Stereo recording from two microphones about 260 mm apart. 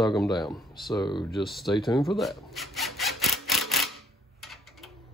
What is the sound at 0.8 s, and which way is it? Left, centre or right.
Speech, centre.